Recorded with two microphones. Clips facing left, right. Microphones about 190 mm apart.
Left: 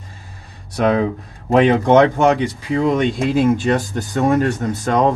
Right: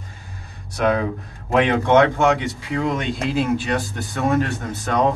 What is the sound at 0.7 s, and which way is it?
Speech, 30° left (ahead or behind).